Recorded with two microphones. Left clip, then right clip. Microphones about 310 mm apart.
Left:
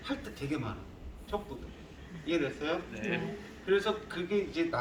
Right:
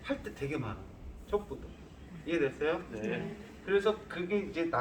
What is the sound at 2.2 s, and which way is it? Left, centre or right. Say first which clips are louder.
Speech: right 1 dB; centre.